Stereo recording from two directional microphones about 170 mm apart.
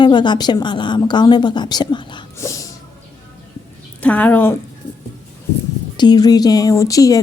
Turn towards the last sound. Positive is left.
turn(degrees=20)  # may be behind; listen again after turning